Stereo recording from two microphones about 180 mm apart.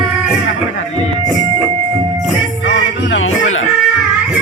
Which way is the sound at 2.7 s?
85° left.